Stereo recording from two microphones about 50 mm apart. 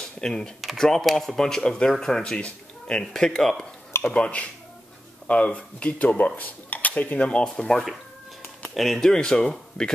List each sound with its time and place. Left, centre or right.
0.0 s computer keyboard: centre
0.6 s speech: centre
2.3 s speech: centre
4.1 s speech: left
7.4 s speech: centre